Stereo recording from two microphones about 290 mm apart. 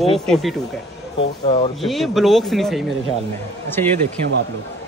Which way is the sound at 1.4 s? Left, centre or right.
Left.